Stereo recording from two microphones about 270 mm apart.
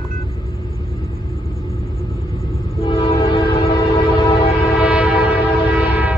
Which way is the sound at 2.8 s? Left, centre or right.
Left.